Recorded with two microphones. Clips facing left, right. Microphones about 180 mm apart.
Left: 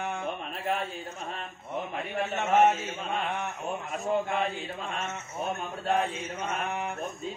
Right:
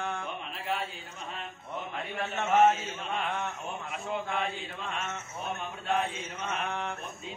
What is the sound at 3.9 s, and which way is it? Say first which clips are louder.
Speech: left 5 dB; 40° left (ahead or behind).